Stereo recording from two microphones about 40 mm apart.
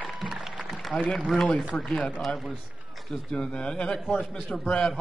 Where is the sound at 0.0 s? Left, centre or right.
Centre.